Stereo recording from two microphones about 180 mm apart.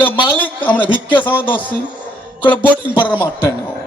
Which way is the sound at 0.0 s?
10° left (ahead or behind).